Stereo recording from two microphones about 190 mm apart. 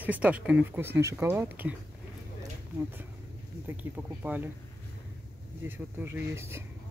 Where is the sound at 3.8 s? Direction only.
10° right (ahead or behind).